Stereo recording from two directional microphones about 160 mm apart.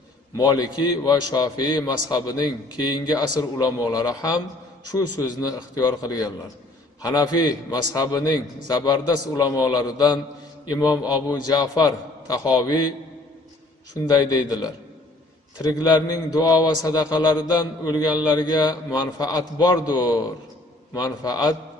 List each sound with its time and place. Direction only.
0.4 s a man's voice: 25° left (ahead or behind)
13.9 s a man's voice: 25° left (ahead or behind)
15.7 s a man's voice: 25° left (ahead or behind)